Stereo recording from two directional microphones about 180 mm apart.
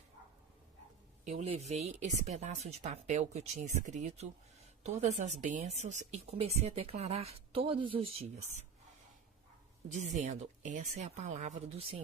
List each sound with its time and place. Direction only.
1.2 s speech: 40° right (ahead or behind)
9.9 s speech: 40° right (ahead or behind)